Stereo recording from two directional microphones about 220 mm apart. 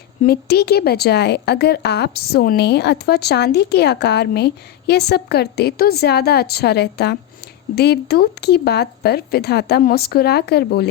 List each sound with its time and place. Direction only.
0.2 s a woman's voice: 45° left (ahead or behind)